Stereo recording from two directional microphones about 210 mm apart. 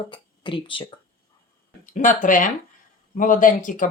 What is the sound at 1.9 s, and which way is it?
Speech, 40° left (ahead or behind).